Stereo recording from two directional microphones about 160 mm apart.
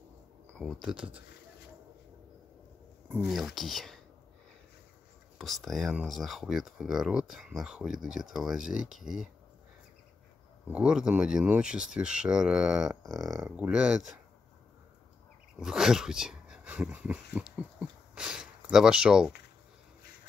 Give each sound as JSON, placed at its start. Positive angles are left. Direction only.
{"t": 0.6, "sound": "speech", "side_deg": 0}
{"t": 3.3, "sound": "speech", "side_deg": 0}
{"t": 5.4, "sound": "speech", "side_deg": 0}
{"t": 10.7, "sound": "speech", "side_deg": -5}
{"t": 15.6, "sound": "speech", "side_deg": -5}